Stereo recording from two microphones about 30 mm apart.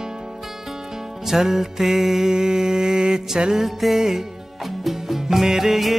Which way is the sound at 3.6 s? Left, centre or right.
Centre.